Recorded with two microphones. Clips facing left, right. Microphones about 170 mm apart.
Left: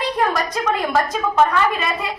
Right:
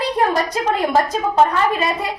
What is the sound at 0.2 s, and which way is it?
A woman's voice, 30° right (ahead or behind).